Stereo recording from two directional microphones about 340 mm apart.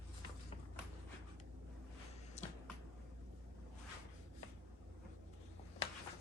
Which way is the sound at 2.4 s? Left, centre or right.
Centre.